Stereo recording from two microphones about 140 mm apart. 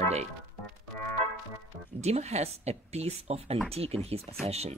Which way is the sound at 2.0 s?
50° right (ahead or behind).